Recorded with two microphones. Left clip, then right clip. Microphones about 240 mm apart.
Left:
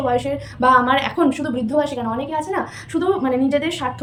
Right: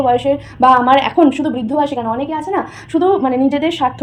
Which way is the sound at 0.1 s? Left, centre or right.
Centre.